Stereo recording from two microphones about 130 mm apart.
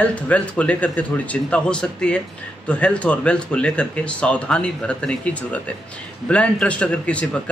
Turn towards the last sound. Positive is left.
turn(degrees=10)  # may be behind; listen again after turning